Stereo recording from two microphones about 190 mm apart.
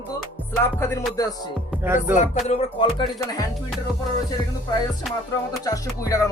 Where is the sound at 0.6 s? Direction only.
15° left (ahead or behind).